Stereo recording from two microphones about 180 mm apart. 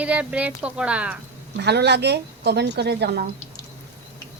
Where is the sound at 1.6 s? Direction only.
70° right (ahead or behind).